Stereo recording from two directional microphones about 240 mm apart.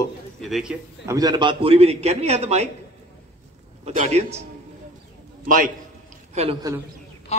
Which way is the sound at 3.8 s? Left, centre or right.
Right.